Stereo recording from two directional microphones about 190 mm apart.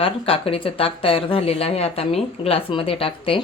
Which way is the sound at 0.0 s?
30° left (ahead or behind).